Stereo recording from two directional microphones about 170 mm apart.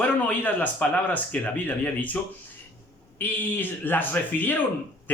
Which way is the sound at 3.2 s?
10° left (ahead or behind).